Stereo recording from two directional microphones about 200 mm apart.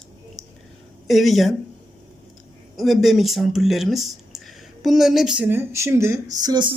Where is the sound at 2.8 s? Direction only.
Centre (ahead or behind).